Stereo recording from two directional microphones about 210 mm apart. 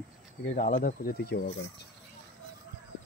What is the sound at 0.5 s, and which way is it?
Speech, 40° left (ahead or behind).